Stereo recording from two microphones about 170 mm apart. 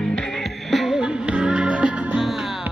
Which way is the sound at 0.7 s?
Centre (ahead or behind).